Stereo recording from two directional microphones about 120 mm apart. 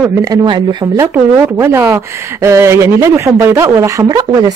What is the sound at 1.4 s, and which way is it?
Speech, 20° right (ahead or behind).